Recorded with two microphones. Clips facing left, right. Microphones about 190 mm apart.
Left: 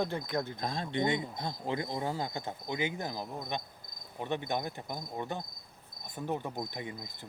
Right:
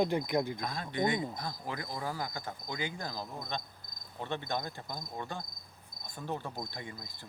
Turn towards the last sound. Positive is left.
turn(degrees=20)  # may be behind; listen again after turning